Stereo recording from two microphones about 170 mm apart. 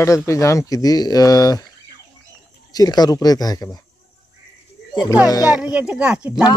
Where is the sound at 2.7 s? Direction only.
25° left (ahead or behind).